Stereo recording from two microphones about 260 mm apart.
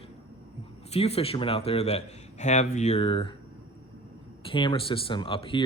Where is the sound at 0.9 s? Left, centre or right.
Left.